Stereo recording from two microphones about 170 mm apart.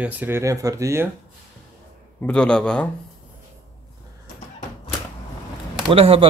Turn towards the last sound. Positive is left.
turn(degrees=-35)  # may be behind; listen again after turning